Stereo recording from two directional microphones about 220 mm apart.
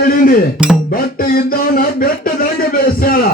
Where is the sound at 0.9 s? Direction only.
40° left (ahead or behind).